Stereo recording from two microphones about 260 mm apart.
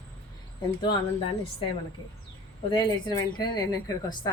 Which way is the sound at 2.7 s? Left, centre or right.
Centre.